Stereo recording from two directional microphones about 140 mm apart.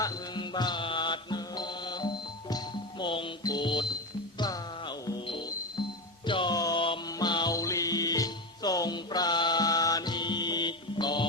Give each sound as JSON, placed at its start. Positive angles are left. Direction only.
{"t": 0.0, "sound": "music", "side_deg": 30}